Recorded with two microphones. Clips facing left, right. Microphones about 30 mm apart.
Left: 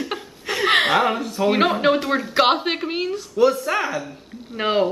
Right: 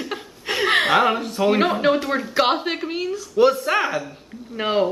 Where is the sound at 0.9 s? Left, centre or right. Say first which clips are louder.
Right 1 dB; centre.